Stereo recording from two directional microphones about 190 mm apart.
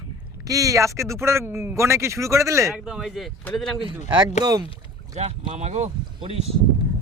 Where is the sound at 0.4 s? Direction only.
15° right (ahead or behind).